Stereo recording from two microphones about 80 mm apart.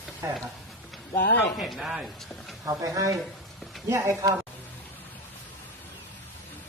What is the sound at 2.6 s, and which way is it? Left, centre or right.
Speech, right.